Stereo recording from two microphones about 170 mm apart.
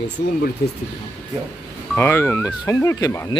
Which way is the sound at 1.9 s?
15° left (ahead or behind).